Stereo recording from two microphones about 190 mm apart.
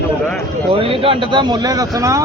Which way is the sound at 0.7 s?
30° right (ahead or behind).